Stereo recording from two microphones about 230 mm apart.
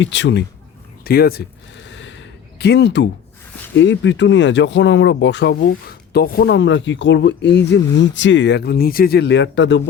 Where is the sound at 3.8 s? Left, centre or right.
Left.